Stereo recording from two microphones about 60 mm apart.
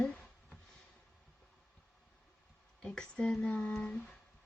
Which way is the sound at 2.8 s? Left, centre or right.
Centre.